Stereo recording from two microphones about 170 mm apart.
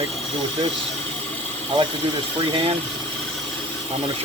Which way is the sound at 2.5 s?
30° right (ahead or behind).